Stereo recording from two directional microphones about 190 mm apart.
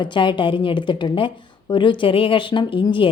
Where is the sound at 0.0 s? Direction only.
25° left (ahead or behind).